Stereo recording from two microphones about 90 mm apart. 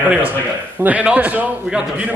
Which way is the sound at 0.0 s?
15° right (ahead or behind).